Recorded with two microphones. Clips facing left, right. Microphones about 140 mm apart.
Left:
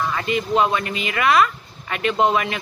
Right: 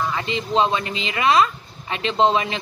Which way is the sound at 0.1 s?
25° right (ahead or behind).